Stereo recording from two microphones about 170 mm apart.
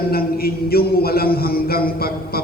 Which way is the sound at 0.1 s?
65° left (ahead or behind).